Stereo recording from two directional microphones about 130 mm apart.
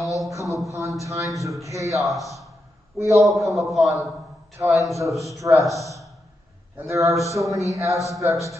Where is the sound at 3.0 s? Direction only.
25° right (ahead or behind).